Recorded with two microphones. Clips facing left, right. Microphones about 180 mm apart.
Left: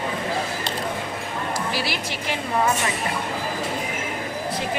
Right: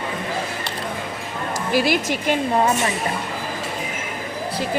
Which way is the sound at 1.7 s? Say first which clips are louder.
Right 8 dB; 50° right (ahead or behind).